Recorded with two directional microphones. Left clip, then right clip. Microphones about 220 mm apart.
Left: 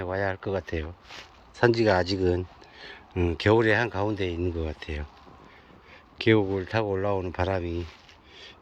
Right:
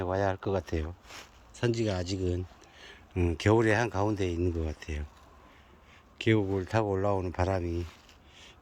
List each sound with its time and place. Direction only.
0.0 s speech: 30° right (ahead or behind)
1.2 s speech: 10° right (ahead or behind)
6.1 s speech: 15° right (ahead or behind)
6.6 s speech: 30° right (ahead or behind)